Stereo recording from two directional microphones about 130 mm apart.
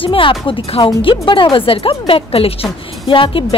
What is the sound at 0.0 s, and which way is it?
Speech, 40° left (ahead or behind).